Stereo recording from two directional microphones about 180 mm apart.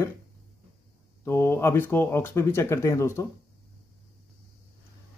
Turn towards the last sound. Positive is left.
turn(degrees=15)  # may be behind; listen again after turning